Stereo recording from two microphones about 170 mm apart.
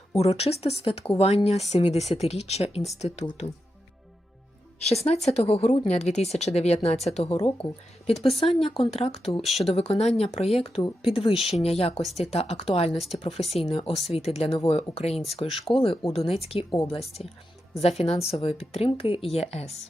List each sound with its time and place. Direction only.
0.2 s speech: 35° left (ahead or behind)
4.8 s speech: 40° left (ahead or behind)
9.4 s speech: centre (ahead or behind)
9.7 s speech: 35° left (ahead or behind)